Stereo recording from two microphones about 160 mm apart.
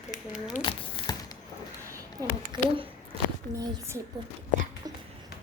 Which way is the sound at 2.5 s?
30° right (ahead or behind).